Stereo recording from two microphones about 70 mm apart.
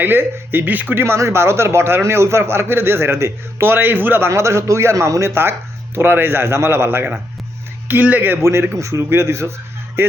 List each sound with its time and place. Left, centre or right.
0.0 s speech: right
4.3 s speech: right
7.9 s speech: right